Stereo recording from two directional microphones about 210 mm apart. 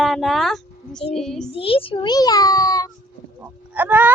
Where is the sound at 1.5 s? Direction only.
25° left (ahead or behind).